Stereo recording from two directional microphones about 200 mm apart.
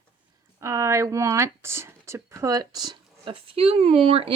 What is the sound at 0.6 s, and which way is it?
Speech, 15° right (ahead or behind).